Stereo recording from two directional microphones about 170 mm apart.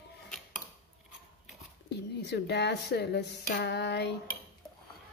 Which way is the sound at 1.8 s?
80° left.